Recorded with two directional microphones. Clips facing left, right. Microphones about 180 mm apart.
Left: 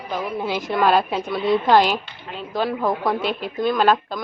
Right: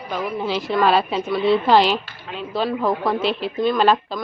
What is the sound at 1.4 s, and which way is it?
A woman's voice, 15° left (ahead or behind).